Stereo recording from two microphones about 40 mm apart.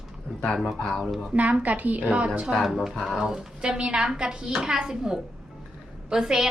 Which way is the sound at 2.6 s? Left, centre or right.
Centre.